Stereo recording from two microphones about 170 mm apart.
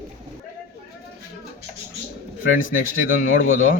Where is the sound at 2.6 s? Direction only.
50° left (ahead or behind).